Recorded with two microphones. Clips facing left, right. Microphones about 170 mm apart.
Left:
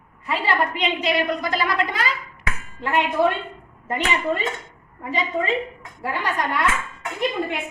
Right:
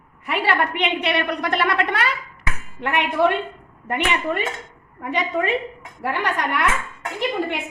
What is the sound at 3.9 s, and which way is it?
A woman's voice, 70° right (ahead or behind).